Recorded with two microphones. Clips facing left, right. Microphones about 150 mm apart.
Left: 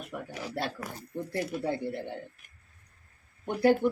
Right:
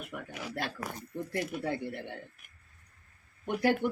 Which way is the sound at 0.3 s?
30° left (ahead or behind).